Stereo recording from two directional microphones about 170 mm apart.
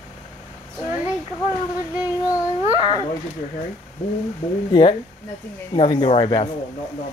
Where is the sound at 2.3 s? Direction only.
25° left (ahead or behind).